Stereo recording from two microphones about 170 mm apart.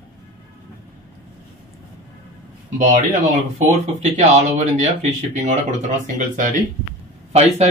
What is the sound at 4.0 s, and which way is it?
Speech, 40° right (ahead or behind).